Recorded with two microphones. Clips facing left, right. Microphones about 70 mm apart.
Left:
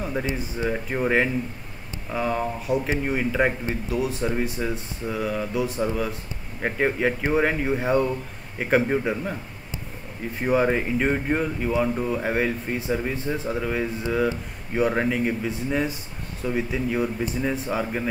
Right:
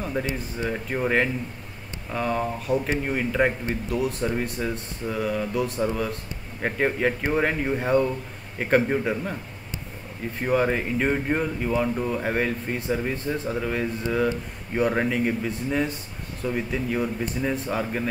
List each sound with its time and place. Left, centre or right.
0.0 s a sound: centre
0.6 s speech: centre
10.4 s speech: centre